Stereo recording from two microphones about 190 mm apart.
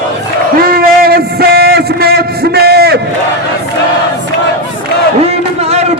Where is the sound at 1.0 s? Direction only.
55° right (ahead or behind).